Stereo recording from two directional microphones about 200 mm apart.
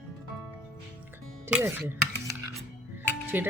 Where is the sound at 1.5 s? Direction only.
10° right (ahead or behind).